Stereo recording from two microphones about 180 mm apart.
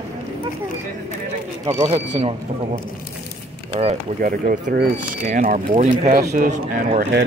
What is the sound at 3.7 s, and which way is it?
Speech, 35° right (ahead or behind).